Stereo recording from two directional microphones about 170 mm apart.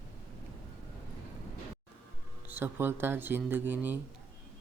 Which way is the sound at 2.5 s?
15° right (ahead or behind).